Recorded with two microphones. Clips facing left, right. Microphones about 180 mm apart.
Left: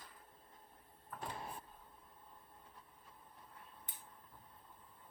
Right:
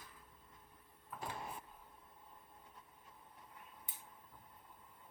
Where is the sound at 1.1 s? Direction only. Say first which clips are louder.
Even; 5° right (ahead or behind).